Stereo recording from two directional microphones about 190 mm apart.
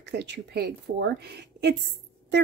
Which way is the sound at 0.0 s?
65° right (ahead or behind).